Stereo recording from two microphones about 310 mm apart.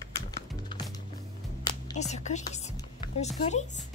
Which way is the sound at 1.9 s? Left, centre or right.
Left.